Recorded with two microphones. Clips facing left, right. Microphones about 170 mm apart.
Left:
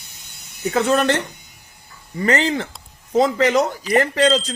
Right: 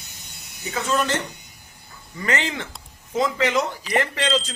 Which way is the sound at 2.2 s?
35° left (ahead or behind).